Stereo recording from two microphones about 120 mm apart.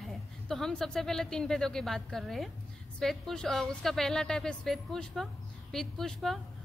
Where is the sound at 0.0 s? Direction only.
5° left (ahead or behind).